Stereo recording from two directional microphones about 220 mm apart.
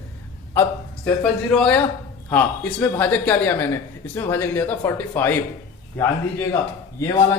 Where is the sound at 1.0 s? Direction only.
5° left (ahead or behind).